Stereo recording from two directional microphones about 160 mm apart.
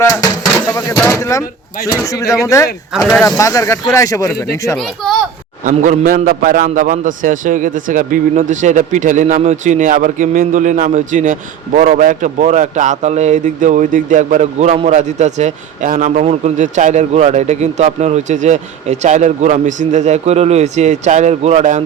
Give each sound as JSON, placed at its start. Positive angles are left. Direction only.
{"t": 0.0, "sound": "speech", "side_deg": 20}
{"t": 2.9, "sound": "a child's voice", "side_deg": -5}
{"t": 3.2, "sound": "speech", "side_deg": 20}
{"t": 5.0, "sound": "a child's voice", "side_deg": 5}
{"t": 5.6, "sound": "a man's voice", "side_deg": -50}